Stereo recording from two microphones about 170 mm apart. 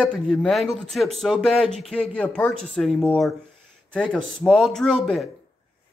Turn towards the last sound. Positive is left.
turn(degrees=0)  # may be behind; listen again after turning